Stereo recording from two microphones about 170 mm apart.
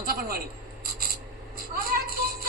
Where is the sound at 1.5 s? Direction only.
60° right (ahead or behind).